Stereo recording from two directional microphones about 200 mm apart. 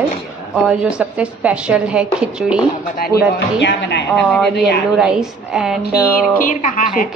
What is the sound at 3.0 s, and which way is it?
Speech, 55° left (ahead or behind).